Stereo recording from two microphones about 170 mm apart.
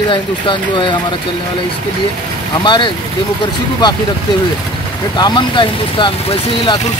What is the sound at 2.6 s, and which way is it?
Speech, 30° left (ahead or behind).